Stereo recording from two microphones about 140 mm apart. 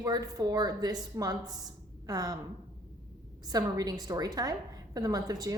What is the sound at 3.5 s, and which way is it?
A woman's voice, 25° right (ahead or behind).